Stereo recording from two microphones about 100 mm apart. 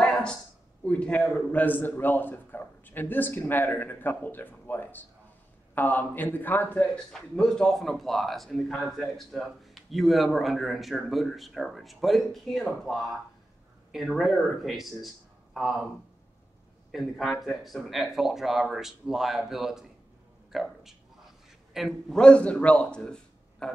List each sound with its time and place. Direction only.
0.0 s a sound: 5° left (ahead or behind)
0.8 s a man's voice: 15° left (ahead or behind)
7.1 s a man's voice: 5° left (ahead or behind)
16.9 s a man's voice: centre (ahead or behind)